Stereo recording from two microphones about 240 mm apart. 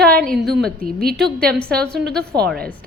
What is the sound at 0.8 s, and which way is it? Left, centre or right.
Speech, right.